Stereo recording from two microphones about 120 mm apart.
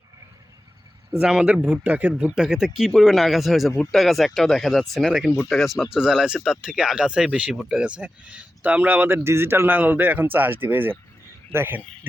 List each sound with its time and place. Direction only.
1.2 s speech: 5° right (ahead or behind)